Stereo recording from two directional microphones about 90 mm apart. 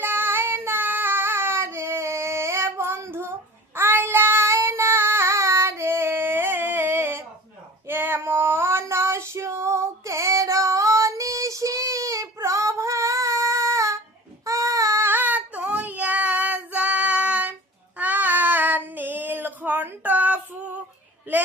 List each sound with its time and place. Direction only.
0.0 s child singing: 25° right (ahead or behind)
7.9 s female singing: 25° right (ahead or behind)
14.4 s child singing: 35° right (ahead or behind); by 17.5 s 15° right (ahead or behind)
17.9 s female singing: 20° right (ahead or behind)